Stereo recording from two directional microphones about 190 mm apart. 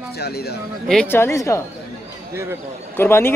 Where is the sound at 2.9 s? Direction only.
10° left (ahead or behind).